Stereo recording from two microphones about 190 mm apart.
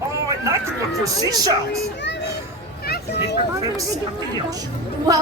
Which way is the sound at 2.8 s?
60° left (ahead or behind).